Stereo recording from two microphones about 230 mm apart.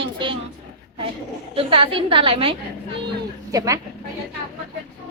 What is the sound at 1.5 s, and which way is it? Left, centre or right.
A woman's voice, right.